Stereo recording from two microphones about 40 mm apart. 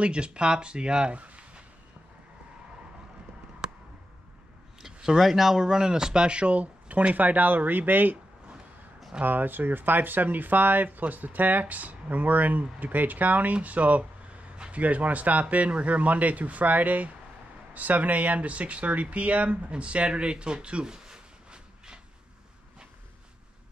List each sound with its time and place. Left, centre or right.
0.0 s speech: right
4.8 s speech: centre
5.6 s speech: centre; by 7.2 s right
7.2 s speech: right
9.2 s a man's voice: right